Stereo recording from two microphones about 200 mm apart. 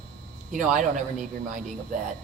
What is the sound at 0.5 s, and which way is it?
Speech, 40° right (ahead or behind).